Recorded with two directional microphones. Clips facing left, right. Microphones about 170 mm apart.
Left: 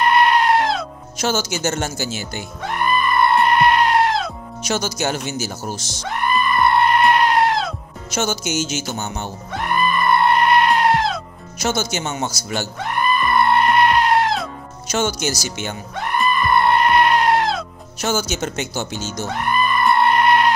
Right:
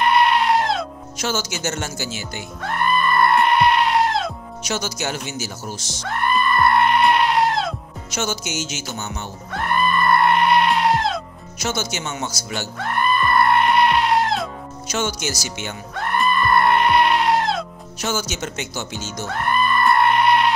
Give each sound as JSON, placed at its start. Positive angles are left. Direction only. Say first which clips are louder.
{"t": 0.0, "sound": "goat", "louder": "left 1 dB", "side_deg": 0}
{"t": 1.2, "sound": "speech", "louder": "left 4 dB", "side_deg": 40}
{"t": 2.6, "sound": "music", "louder": "even", "side_deg": 5}
{"t": 4.6, "sound": "speech", "louder": "left 4 dB", "side_deg": 35}
{"t": 6.0, "sound": "music", "louder": "even", "side_deg": 0}
{"t": 8.9, "sound": "speech", "louder": "left 3 dB", "side_deg": 35}
{"t": 9.5, "sound": "goat", "louder": "even", "side_deg": 0}
{"t": 11.9, "sound": "speech", "louder": "left 3 dB", "side_deg": 35}
{"t": 12.7, "sound": "music", "louder": "right 1 dB", "side_deg": 0}
{"t": 14.9, "sound": "speech", "louder": "left 4 dB", "side_deg": 35}
{"t": 15.9, "sound": "goat", "louder": "even", "side_deg": 0}
{"t": 18.0, "sound": "speech", "louder": "left 3 dB", "side_deg": 40}
{"t": 19.2, "sound": "goat", "louder": "even", "side_deg": 0}